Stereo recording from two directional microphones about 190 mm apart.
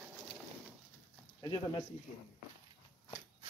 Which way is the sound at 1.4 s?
25° left (ahead or behind).